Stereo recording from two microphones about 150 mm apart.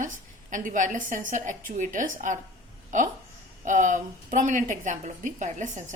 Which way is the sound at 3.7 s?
55° right (ahead or behind).